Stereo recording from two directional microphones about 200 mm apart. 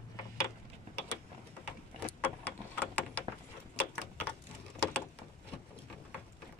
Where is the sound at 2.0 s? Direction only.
10° left (ahead or behind).